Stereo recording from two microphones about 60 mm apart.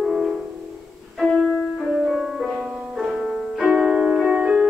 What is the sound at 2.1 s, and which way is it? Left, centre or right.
Music, centre.